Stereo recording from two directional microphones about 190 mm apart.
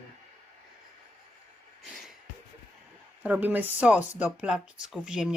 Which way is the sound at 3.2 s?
10° right (ahead or behind).